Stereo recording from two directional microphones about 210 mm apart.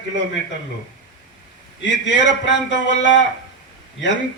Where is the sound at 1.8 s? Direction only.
60° left (ahead or behind).